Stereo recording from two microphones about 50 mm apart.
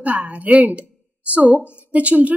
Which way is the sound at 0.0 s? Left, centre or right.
Right.